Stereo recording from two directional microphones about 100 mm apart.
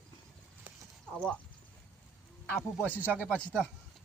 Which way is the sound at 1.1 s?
10° left (ahead or behind).